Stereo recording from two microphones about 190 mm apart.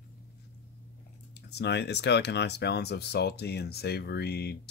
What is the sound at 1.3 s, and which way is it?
Speech, 60° left (ahead or behind).